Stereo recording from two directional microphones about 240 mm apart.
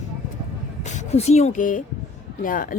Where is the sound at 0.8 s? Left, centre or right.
Left.